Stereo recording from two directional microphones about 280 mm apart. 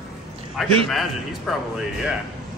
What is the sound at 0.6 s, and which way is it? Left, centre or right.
A man's voice, centre.